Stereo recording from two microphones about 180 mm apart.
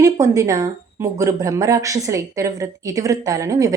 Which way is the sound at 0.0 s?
20° right (ahead or behind).